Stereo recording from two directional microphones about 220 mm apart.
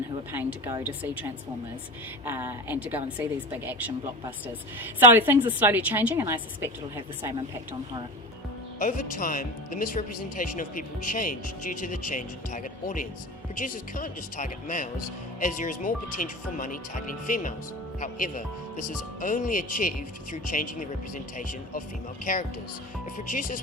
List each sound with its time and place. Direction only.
0.3 s a woman's voice: 10° right (ahead or behind)
2.2 s a woman's voice: 10° right (ahead or behind)
8.8 s speech: 35° left (ahead or behind)
23.2 s speech: 35° left (ahead or behind)